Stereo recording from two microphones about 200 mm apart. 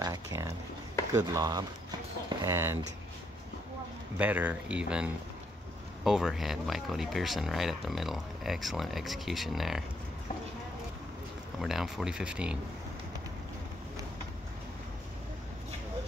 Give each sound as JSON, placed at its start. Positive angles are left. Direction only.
{"t": 0.0, "sound": "a sound", "side_deg": -15}
{"t": 1.1, "sound": "speech", "side_deg": -20}
{"t": 4.2, "sound": "speech", "side_deg": -10}
{"t": 11.6, "sound": "speech", "side_deg": 0}